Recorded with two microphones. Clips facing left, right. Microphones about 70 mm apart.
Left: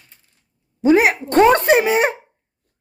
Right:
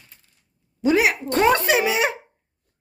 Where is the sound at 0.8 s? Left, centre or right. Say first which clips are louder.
Left 5 dB; left.